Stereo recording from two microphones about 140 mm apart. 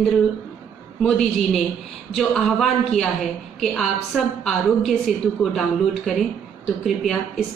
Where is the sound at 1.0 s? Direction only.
Centre (ahead or behind).